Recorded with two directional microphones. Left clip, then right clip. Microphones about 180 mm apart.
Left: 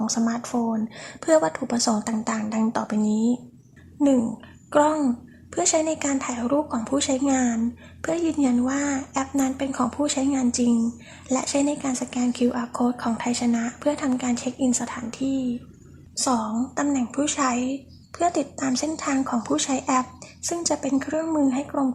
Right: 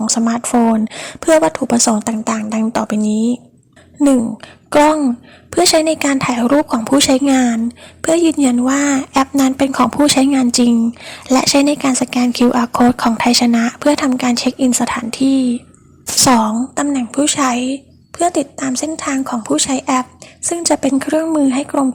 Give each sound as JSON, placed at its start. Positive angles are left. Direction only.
{"t": 0.0, "sound": "a woman's voice", "side_deg": -30}
{"t": 4.7, "sound": "a woman's voice", "side_deg": -35}
{"t": 16.5, "sound": "a woman's voice", "side_deg": -25}